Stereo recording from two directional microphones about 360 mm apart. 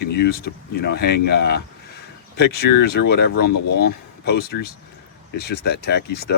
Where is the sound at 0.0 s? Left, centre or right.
Left.